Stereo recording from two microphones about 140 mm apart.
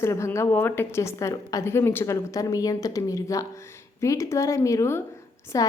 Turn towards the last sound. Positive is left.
turn(degrees=25)  # may be behind; listen again after turning